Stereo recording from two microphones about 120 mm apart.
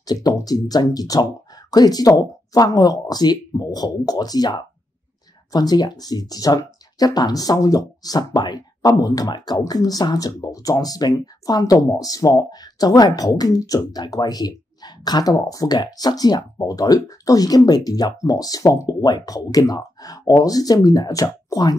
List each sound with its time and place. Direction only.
0.0 s speech: 35° left (ahead or behind)